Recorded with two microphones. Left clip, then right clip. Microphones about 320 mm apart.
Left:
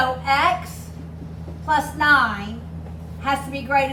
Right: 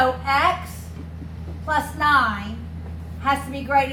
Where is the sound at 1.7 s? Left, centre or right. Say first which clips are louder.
Left 2 dB; centre.